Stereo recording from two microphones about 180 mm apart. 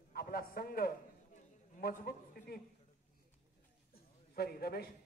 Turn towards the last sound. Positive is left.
turn(degrees=55)  # may be behind; listen again after turning